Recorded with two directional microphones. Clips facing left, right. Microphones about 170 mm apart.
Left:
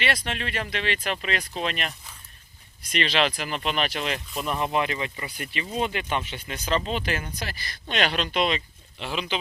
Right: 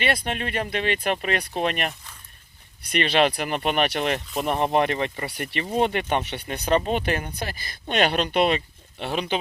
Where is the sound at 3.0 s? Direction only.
50° right (ahead or behind).